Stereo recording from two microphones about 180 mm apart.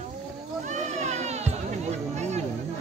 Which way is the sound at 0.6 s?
40° right (ahead or behind).